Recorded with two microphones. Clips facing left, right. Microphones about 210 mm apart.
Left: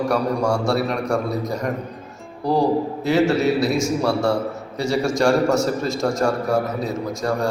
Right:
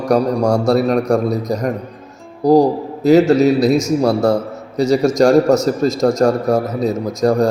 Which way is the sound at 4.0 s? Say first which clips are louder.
Right 5 dB; 40° right (ahead or behind).